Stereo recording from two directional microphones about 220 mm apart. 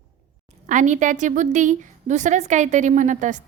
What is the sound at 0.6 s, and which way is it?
A woman's voice, 35° right (ahead or behind).